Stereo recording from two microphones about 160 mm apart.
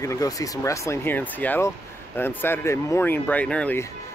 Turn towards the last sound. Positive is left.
turn(degrees=10)  # may be behind; listen again after turning